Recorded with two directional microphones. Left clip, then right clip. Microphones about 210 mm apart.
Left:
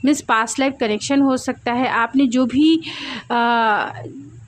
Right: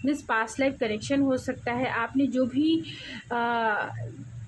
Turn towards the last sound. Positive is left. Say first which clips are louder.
# left 10 dB
turn(degrees=45)  # may be behind; listen again after turning